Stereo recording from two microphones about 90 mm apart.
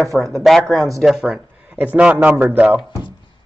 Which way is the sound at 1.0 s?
5° right (ahead or behind).